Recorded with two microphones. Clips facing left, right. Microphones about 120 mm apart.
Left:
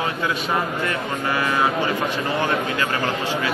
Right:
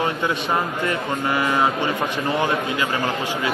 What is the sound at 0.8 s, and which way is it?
A man's voice, 20° right (ahead or behind).